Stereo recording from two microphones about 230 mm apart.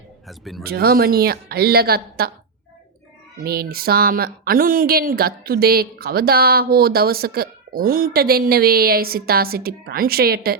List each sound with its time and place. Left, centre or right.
0.3 s speech: centre
0.6 s speech: right
3.4 s speech: right